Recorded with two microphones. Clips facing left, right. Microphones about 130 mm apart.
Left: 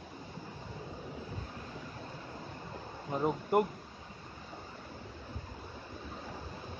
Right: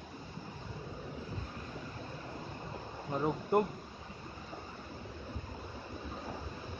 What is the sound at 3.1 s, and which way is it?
Speech, 15° left (ahead or behind).